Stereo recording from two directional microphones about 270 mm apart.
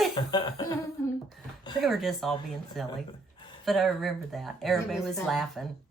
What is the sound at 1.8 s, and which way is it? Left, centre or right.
Speech, centre.